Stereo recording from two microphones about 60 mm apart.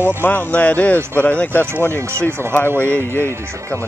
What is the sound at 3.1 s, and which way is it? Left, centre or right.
Speech, left.